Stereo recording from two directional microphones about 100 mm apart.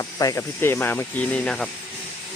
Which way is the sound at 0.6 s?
25° left (ahead or behind).